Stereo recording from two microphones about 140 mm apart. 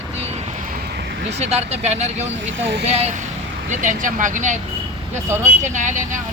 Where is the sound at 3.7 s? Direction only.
65° right (ahead or behind).